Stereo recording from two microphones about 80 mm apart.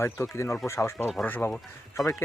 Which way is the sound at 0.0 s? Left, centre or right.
Left.